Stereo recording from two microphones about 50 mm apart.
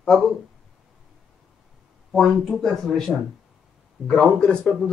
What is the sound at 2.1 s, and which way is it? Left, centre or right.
Speech, centre.